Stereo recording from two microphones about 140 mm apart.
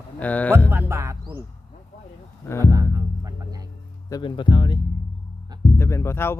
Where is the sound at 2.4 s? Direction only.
20° left (ahead or behind).